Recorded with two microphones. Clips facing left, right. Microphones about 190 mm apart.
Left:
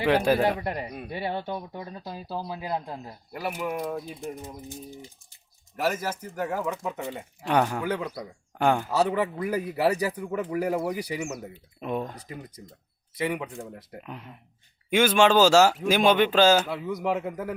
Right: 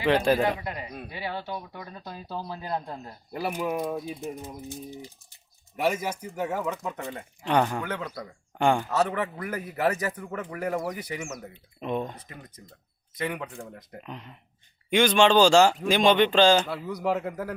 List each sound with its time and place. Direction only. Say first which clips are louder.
0.0 s speech: left 1 dB; 10° left (ahead or behind)
0.6 s speech: left 4 dB; 60° left (ahead or behind)
2.3 s speech: left 1 dB; 10° left (ahead or behind)
3.3 s speech: right 2 dB; 25° right (ahead or behind)
6.3 s speech: even; centre (ahead or behind)
9.0 s speech: left 4 dB; 15° left (ahead or behind)
10.8 s speech: left 3 dB; 30° left (ahead or behind)
11.4 s speech: even; 10° left (ahead or behind)
13.1 s speech: left 3 dB; 10° left (ahead or behind)